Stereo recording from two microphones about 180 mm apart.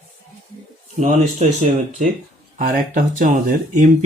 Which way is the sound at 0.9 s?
40° right (ahead or behind).